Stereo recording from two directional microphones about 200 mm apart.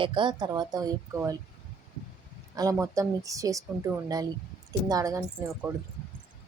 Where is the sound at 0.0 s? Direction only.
25° right (ahead or behind).